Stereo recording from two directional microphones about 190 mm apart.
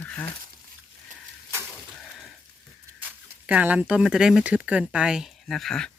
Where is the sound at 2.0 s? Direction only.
Centre (ahead or behind).